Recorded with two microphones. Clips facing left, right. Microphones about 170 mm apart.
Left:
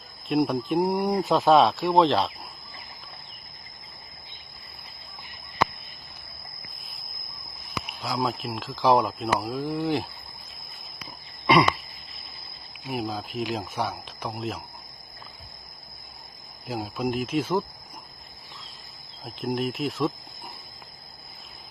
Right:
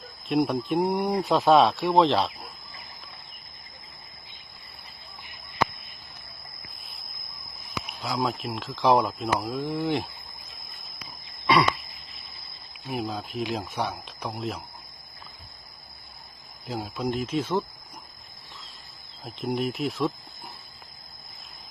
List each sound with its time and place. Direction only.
0.3 s speech: centre (ahead or behind)
7.9 s speech: centre (ahead or behind)
12.8 s speech: centre (ahead or behind)
16.6 s speech: 5° left (ahead or behind)
19.2 s speech: centre (ahead or behind)